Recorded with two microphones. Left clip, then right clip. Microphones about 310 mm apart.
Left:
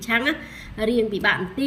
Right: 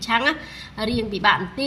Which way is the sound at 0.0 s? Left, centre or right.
Centre.